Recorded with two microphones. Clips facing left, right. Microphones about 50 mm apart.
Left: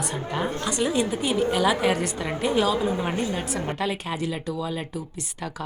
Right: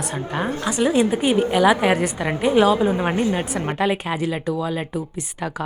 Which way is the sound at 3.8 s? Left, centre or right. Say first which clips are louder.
Right 6 dB; right.